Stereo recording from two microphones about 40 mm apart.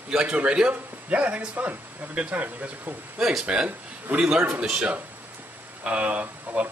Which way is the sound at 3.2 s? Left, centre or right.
Centre.